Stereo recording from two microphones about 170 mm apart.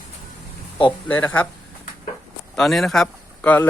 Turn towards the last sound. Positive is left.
turn(degrees=10)  # may be behind; listen again after turning